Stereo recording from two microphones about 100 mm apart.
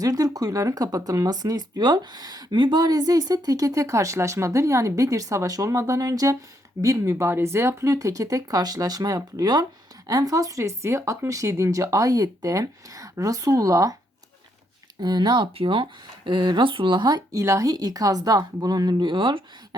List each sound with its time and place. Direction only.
0.0 s speech: 40° right (ahead or behind)
15.0 s speech: 45° right (ahead or behind)
15.5 s speech: 60° right (ahead or behind)
17.4 s speech: 35° right (ahead or behind); by 19.4 s 55° right (ahead or behind)